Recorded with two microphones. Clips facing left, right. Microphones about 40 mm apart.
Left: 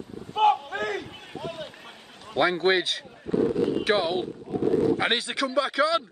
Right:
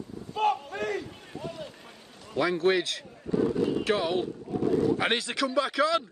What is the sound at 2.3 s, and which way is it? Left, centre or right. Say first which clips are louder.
Speech: left 3 dB; left.